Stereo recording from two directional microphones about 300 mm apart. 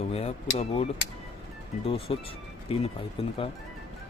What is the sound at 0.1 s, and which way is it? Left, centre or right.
Speech, centre.